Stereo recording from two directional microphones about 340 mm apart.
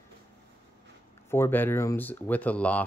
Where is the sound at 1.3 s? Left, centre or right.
Centre.